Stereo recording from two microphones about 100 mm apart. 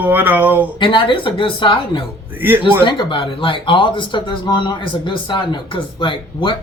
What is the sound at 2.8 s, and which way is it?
Speech, 50° left (ahead or behind).